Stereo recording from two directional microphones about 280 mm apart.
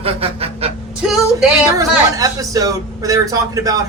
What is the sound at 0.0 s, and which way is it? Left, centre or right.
Honk, right.